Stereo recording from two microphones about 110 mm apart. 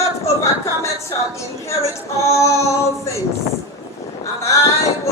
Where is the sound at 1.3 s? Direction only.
25° left (ahead or behind).